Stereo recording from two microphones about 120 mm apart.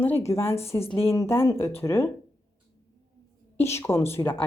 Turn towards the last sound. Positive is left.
turn(degrees=20)  # may be behind; listen again after turning